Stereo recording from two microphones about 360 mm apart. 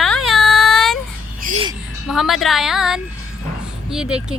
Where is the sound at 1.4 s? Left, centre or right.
Centre.